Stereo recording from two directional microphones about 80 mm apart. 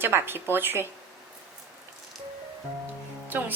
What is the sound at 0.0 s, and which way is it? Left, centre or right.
Speech, right.